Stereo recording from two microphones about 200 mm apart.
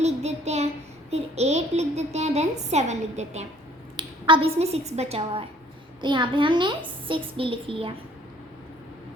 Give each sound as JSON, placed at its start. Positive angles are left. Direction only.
{"t": 0.0, "sound": "child singing", "side_deg": -35}
{"t": 1.1, "sound": "a woman's voice", "side_deg": -35}